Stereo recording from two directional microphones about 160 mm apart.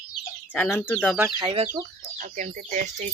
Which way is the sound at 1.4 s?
35° right (ahead or behind).